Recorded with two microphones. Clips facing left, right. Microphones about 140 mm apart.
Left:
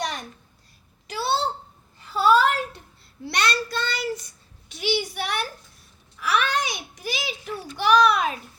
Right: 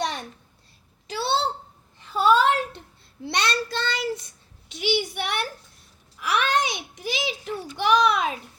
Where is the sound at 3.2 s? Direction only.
25° right (ahead or behind).